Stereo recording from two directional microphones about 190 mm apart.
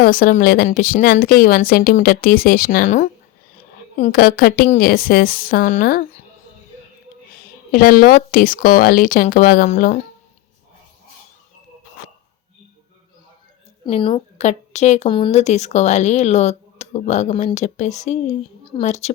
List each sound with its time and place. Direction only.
0.0 s speech: 50° left (ahead or behind)
7.7 s speech: 50° left (ahead or behind)
13.8 s a woman's voice: 25° left (ahead or behind)